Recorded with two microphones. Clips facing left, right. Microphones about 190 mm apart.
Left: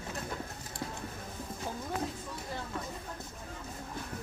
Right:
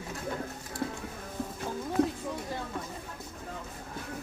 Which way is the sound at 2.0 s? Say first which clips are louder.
Right 14 dB; 70° right (ahead or behind).